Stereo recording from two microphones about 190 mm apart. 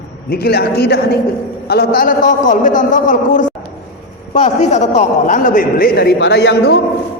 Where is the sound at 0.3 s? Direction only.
55° left (ahead or behind).